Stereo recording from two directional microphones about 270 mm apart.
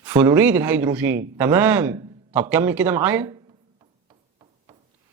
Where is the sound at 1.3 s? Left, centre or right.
Centre.